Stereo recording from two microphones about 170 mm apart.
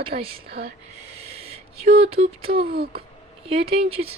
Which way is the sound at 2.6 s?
65° right (ahead or behind).